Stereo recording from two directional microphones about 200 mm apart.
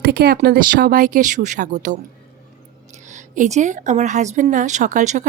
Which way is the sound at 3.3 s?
40° right (ahead or behind).